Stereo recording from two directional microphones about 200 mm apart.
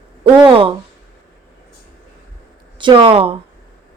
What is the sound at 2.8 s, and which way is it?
Speech, 25° right (ahead or behind).